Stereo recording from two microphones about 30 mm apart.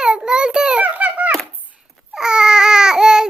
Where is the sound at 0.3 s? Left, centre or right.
Right.